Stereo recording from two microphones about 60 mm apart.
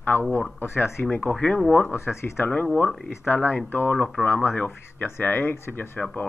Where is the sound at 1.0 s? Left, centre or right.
Left; by 1.8 s centre.